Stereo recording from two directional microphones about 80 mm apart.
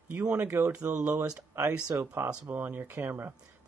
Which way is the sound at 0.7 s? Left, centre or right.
Centre.